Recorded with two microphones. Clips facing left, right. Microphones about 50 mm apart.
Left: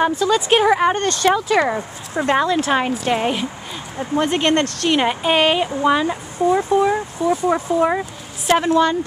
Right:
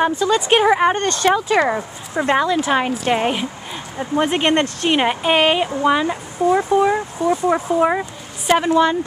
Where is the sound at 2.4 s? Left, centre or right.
Centre.